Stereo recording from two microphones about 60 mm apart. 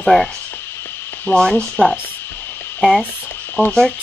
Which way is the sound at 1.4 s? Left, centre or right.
Centre.